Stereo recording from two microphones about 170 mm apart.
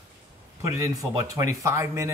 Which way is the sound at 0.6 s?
20° right (ahead or behind).